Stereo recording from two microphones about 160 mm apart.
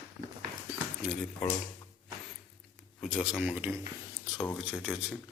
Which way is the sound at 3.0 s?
5° right (ahead or behind).